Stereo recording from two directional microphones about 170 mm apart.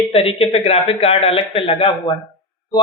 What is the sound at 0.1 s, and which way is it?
A man's voice, 35° left (ahead or behind).